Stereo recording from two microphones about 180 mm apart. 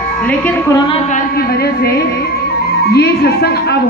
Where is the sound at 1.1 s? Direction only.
55° left (ahead or behind).